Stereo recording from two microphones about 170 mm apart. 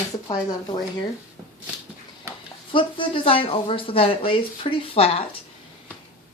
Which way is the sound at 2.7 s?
30° left (ahead or behind).